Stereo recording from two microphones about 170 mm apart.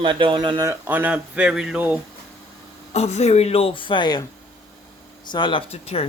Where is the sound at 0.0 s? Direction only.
30° right (ahead or behind).